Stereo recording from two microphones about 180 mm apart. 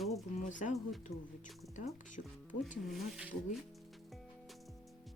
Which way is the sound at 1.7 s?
45° left (ahead or behind).